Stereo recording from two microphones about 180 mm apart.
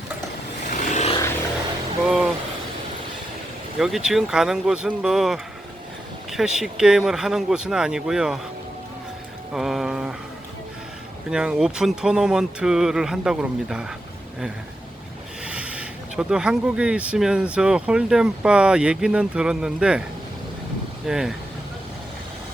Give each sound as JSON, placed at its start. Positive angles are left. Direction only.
{"t": 0.7, "sound": "vehicle", "side_deg": 40}
{"t": 2.0, "sound": "a sound", "side_deg": -5}
{"t": 3.8, "sound": "speech", "side_deg": 0}
{"t": 9.5, "sound": "speech", "side_deg": 0}
{"t": 11.3, "sound": "speech", "side_deg": -5}
{"t": 15.4, "sound": "speech", "side_deg": -5}
{"t": 21.1, "sound": "speech", "side_deg": -5}